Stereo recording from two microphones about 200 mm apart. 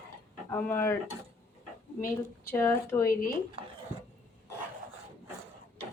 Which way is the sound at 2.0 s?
10° left (ahead or behind).